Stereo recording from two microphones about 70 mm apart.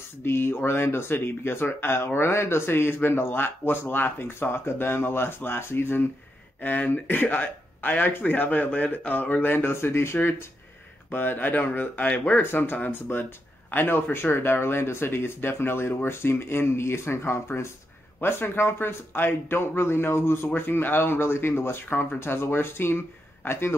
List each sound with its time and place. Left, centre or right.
0.2 s speech: left